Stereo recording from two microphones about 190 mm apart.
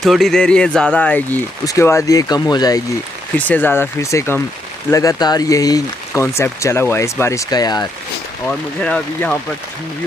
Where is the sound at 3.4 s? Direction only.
10° left (ahead or behind).